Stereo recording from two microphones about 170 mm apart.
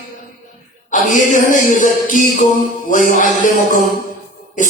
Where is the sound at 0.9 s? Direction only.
50° left (ahead or behind).